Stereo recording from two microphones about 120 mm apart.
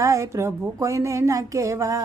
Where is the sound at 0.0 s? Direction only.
25° right (ahead or behind).